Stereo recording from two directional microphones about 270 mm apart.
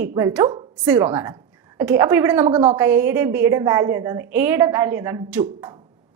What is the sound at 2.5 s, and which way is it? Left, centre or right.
Speech, right.